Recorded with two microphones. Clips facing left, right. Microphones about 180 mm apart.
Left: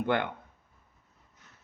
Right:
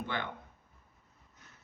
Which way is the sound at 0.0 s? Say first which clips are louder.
Left 9 dB; 60° left (ahead or behind).